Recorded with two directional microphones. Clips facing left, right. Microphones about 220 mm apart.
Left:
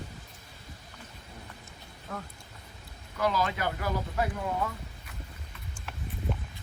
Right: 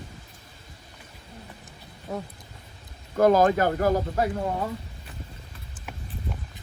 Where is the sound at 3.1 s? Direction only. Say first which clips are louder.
Right 11 dB; 45° right (ahead or behind).